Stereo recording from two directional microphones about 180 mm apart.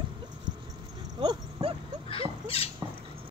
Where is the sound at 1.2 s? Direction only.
30° right (ahead or behind).